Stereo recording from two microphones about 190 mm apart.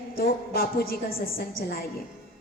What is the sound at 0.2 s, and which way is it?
A woman's voice, 50° left (ahead or behind).